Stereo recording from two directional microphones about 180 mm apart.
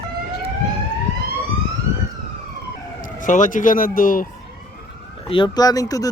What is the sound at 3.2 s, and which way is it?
Speech, 45° left (ahead or behind).